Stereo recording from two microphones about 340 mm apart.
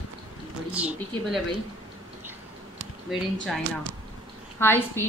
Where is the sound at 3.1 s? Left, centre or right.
Centre.